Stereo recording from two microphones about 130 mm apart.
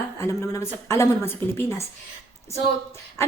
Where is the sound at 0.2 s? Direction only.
25° left (ahead or behind).